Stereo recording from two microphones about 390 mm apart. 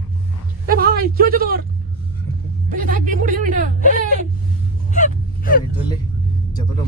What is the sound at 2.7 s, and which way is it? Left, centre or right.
Speech, right.